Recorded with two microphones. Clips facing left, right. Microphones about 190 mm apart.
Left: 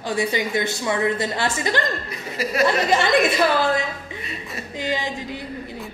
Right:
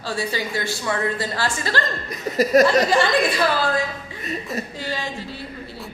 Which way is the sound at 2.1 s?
40° right (ahead or behind).